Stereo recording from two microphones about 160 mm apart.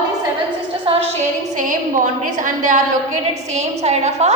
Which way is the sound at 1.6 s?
55° right (ahead or behind).